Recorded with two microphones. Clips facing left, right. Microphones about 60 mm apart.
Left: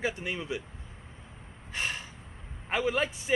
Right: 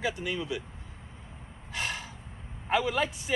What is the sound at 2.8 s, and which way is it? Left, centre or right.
Speech, left.